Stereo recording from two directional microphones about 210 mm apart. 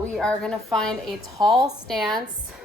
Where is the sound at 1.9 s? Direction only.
Centre (ahead or behind).